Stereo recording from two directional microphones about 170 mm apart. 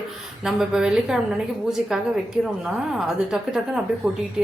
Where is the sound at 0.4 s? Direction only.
5° right (ahead or behind).